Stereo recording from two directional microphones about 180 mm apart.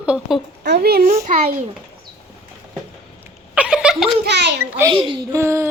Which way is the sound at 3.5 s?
5° right (ahead or behind).